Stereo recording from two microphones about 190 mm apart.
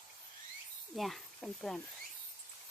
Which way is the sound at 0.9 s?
Centre (ahead or behind).